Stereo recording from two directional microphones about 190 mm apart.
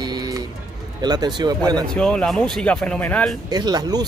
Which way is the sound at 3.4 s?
20° right (ahead or behind).